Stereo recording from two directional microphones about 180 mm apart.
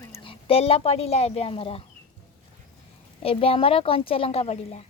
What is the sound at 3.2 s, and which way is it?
A woman's voice, 30° left (ahead or behind).